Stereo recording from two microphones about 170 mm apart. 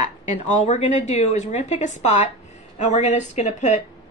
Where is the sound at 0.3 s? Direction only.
45° left (ahead or behind).